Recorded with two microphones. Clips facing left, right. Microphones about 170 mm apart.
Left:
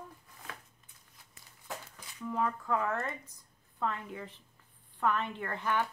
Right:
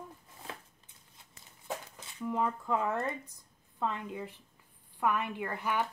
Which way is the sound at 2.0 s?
20° right (ahead or behind).